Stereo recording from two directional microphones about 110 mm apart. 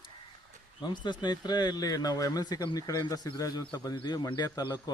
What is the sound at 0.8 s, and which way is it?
Speech, 45° left (ahead or behind).